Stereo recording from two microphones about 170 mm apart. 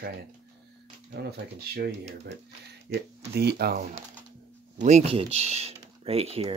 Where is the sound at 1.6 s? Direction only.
70° right (ahead or behind).